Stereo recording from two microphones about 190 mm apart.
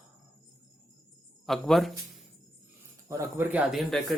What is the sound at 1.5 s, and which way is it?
Speech, centre (ahead or behind).